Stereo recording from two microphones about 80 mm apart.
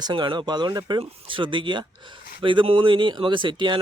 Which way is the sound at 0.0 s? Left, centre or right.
Right.